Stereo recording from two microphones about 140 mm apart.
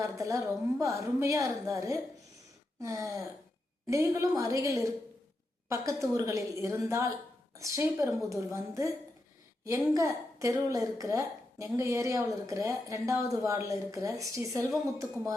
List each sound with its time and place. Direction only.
0.0 s a woman's voice: 25° right (ahead or behind)
9.9 s a woman's voice: 25° right (ahead or behind)